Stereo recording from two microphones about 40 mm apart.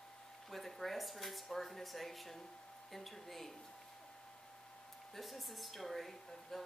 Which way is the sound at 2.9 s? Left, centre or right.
Centre.